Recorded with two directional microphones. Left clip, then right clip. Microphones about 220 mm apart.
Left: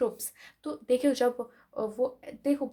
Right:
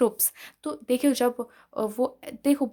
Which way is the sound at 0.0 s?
35° right (ahead or behind).